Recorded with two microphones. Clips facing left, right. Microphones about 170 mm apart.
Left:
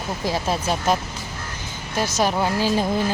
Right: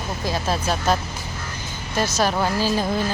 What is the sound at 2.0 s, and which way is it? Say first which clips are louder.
Speech: even; 15° left (ahead or behind).